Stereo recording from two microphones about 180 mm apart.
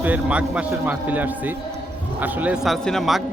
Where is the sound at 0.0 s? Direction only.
10° right (ahead or behind).